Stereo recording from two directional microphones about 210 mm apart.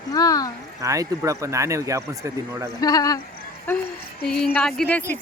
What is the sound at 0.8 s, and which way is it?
Speech, 15° right (ahead or behind).